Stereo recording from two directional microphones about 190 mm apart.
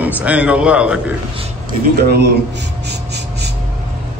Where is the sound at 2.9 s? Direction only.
60° right (ahead or behind).